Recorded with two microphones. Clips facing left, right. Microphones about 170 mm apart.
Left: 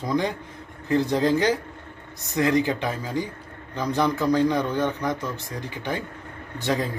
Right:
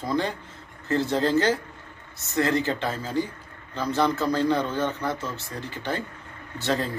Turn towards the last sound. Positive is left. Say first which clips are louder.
# left 1 dB
turn(degrees=15)  # may be behind; listen again after turning